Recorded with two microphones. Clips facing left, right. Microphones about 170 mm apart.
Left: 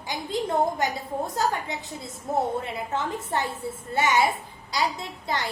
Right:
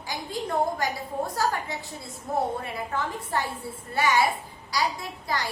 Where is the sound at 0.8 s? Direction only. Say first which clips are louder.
Left 1 dB; 20° left (ahead or behind).